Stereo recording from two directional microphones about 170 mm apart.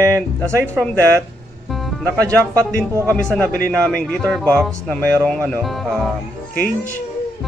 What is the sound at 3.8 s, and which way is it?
Speech, 5° left (ahead or behind).